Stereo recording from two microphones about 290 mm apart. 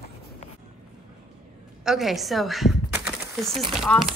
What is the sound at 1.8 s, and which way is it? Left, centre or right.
Speech, centre.